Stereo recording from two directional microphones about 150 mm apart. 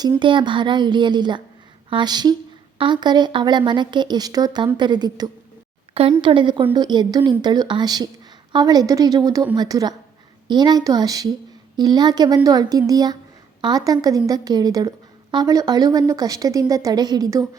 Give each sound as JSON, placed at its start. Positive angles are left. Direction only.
{"t": 0.2, "sound": "a woman's voice", "side_deg": -35}
{"t": 5.9, "sound": "a woman's voice", "side_deg": -40}